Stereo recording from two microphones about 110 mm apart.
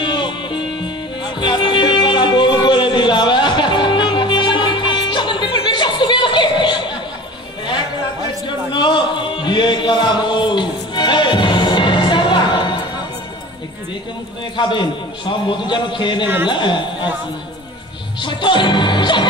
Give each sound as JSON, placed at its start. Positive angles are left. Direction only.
{"t": 0.0, "sound": "music", "side_deg": 45}
{"t": 8.5, "sound": "a sound", "side_deg": 45}
{"t": 14.6, "sound": "a man's voice", "side_deg": 45}
{"t": 18.2, "sound": "a man's voice", "side_deg": 45}